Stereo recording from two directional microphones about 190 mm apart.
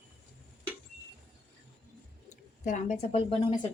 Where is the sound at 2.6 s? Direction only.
40° left (ahead or behind).